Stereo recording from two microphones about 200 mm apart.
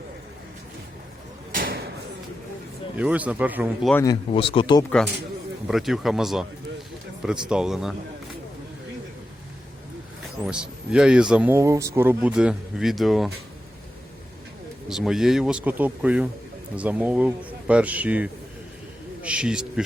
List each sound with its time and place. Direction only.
1.5 s a sound: 45° right (ahead or behind)
2.9 s speech: 5° right (ahead or behind)
3.9 s speech: 20° left (ahead or behind)
5.6 s speech: centre (ahead or behind)
7.5 s speech: 5° right (ahead or behind)
10.4 s speech: 5° right (ahead or behind)
14.8 s speech: centre (ahead or behind)